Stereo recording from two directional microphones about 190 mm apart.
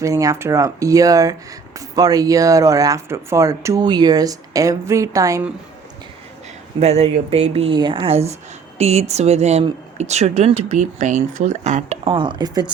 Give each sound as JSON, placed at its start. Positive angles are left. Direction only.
{"t": 0.0, "sound": "speech", "side_deg": -15}
{"t": 6.7, "sound": "speech", "side_deg": -35}
{"t": 12.0, "sound": "speech", "side_deg": -25}